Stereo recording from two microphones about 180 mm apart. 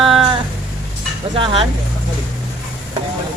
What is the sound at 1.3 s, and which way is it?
Speech, 30° right (ahead or behind).